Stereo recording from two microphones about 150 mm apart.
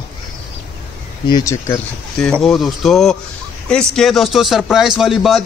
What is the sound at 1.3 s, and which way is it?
Speech, 20° left (ahead or behind).